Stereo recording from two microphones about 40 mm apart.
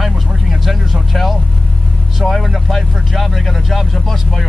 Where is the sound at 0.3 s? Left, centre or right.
Centre.